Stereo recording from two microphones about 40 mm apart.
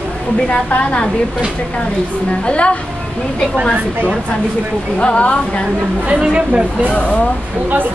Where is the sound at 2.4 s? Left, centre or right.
Left.